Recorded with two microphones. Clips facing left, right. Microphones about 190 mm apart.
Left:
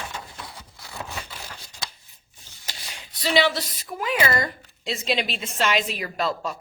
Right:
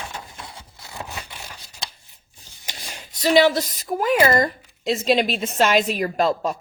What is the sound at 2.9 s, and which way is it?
Speech, 45° right (ahead or behind).